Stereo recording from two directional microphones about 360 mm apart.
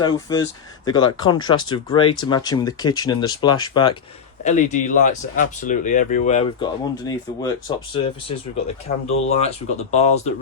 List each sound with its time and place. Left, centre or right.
0.0 s speech: centre